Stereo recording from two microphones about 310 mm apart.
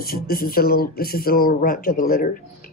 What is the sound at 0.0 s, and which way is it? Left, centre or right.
Speech, left.